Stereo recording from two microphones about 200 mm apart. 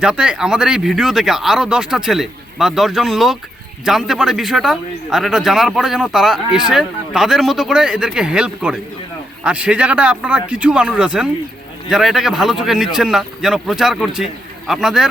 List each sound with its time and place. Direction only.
0.0 s a man's voice: 5° right (ahead or behind)